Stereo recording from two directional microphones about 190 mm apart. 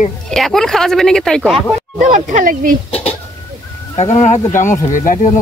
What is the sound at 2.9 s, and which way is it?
Speech, 30° left (ahead or behind).